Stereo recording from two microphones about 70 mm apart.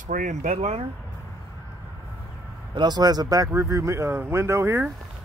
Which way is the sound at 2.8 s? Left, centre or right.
Right.